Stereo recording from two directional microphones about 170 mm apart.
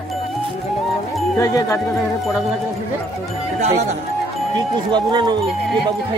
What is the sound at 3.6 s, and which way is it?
Speech, 40° right (ahead or behind).